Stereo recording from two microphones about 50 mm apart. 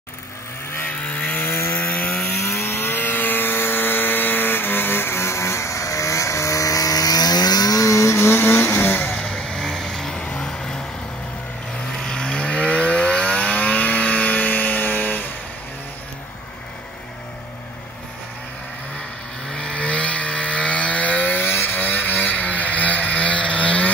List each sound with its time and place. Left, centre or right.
0.8 s chainsaw: left
1.4 s chainsaw: left
2.4 s chainsaw: left
7.8 s vehicle: left
9.1 s vehicle: centre
12.0 s vehicle: centre; by 15.2 s left
19.5 s chainsaw: centre